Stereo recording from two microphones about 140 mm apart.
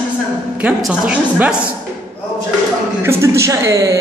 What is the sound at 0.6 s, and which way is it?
Speech, 5° right (ahead or behind).